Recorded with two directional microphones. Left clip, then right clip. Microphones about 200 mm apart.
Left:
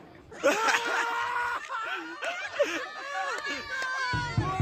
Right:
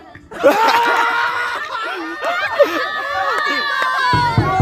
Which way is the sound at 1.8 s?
Centre (ahead or behind).